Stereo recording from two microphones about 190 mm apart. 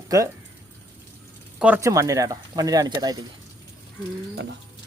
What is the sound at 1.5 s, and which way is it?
Speech, 10° right (ahead or behind).